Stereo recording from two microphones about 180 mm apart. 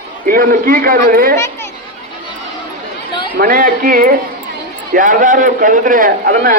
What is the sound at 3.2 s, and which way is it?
A man's voice, 55° right (ahead or behind).